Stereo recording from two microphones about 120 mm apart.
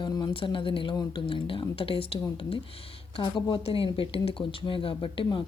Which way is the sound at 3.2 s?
40° left (ahead or behind).